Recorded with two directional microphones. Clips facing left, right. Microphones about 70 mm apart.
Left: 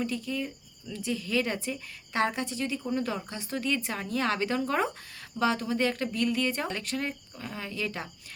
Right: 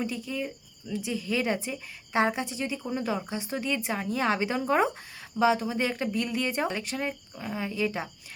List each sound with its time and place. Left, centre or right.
0.0 s speech: centre